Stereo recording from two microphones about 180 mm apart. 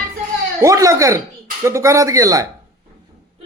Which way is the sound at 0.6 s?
20° right (ahead or behind).